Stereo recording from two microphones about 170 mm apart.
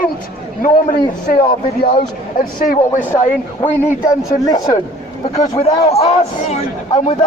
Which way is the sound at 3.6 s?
15° left (ahead or behind).